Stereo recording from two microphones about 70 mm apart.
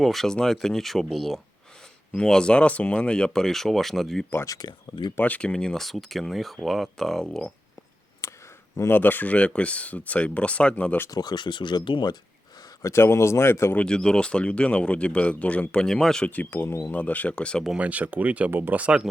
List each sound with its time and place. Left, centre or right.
0.0 s speech: centre
4.4 s speech: left
5.1 s speech: left; by 7.4 s centre
8.2 s a sound: left
8.9 s speech: left
11.1 s speech: left
12.8 s speech: left
13.7 s speech: centre
15.9 s speech: centre
16.2 s speech: left
16.5 s speech: left
16.9 s speech: left
17.7 s speech: right